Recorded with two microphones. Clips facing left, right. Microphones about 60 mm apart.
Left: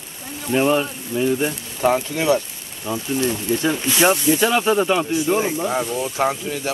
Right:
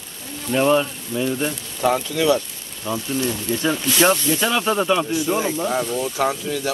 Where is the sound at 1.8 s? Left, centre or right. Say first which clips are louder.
Even; left.